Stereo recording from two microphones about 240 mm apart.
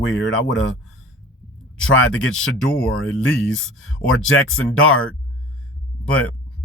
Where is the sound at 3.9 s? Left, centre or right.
Left.